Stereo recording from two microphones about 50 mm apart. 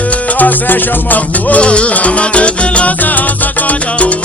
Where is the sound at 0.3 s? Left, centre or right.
Left.